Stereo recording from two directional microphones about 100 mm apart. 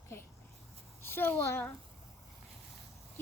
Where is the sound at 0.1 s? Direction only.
25° left (ahead or behind).